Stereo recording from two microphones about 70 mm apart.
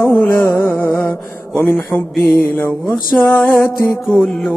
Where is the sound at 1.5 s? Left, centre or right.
Left.